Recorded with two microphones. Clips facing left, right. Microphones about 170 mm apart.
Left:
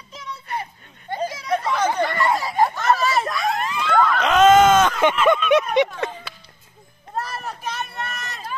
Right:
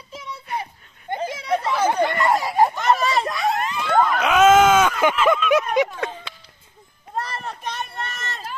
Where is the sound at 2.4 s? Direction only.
10° right (ahead or behind).